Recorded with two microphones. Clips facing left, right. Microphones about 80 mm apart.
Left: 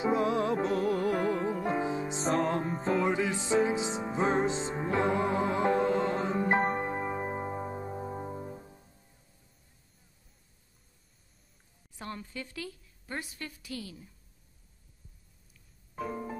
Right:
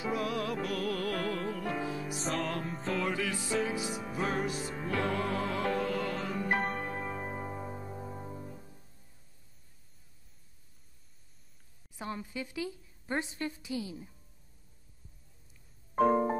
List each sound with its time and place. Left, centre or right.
0.0 s music: left
2.2 s music: left
3.0 s music: left
12.0 s a woman's voice: centre
15.9 s music: right